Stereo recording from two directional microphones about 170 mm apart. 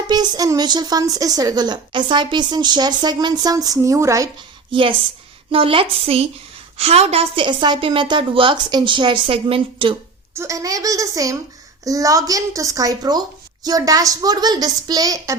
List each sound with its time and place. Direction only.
0.1 s a woman's voice: 20° right (ahead or behind)
4.7 s a woman's voice: 30° right (ahead or behind)
10.3 s a woman's voice: 20° right (ahead or behind)